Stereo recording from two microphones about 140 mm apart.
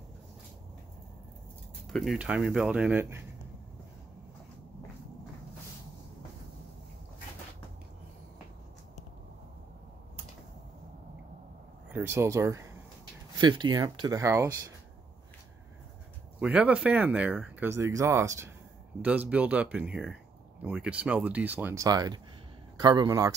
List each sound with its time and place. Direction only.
1.9 s speech: 5° left (ahead or behind); by 3.2 s 15° right (ahead or behind)
11.9 s speech: 15° right (ahead or behind)
13.4 s speech: 30° right (ahead or behind)
16.3 s speech: 10° right (ahead or behind)
18.9 s speech: 10° right (ahead or behind)
21.7 s speech: 25° right (ahead or behind)